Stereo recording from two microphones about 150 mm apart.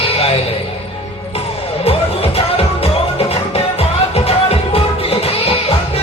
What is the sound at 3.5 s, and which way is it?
Music, 40° left (ahead or behind).